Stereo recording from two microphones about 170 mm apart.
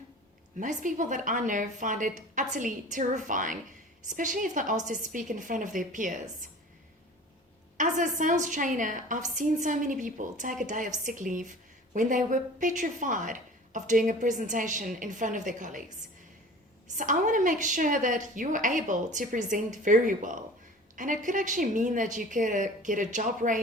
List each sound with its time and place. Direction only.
0.6 s a woman's voice: 50° right (ahead or behind)
7.8 s a woman's voice: 50° right (ahead or behind)
16.9 s a woman's voice: 50° right (ahead or behind)